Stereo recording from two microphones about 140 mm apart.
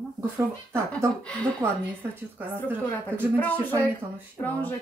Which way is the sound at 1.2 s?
5° left (ahead or behind).